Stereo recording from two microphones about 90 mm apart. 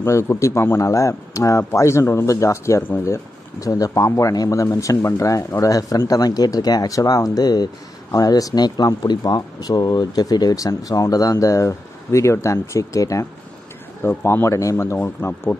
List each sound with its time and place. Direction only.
0.0 s speech: 30° left (ahead or behind)
14.0 s speech: 25° left (ahead or behind)
15.2 s speech: 25° left (ahead or behind)